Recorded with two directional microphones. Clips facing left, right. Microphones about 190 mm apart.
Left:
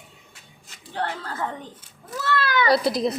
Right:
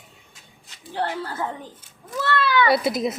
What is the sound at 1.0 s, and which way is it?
Speech, 10° right (ahead or behind).